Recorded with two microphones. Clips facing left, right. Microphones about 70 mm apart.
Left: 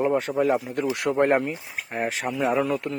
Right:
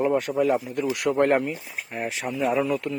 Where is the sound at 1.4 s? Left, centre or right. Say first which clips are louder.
Even; left.